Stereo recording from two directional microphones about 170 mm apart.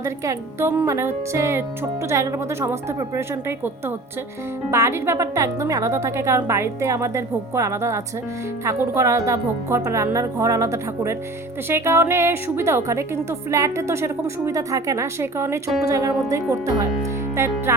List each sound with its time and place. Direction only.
0.0 s a woman's voice: 15° right (ahead or behind)